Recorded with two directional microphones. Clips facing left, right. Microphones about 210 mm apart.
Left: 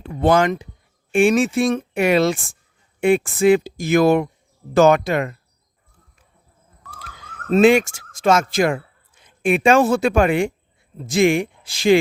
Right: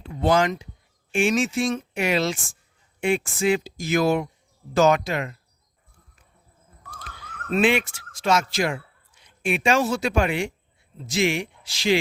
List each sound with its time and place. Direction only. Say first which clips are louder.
0.0 s speech: left 4 dB; 55° left (ahead or behind)
7.5 s speech: left 8 dB; 45° left (ahead or behind)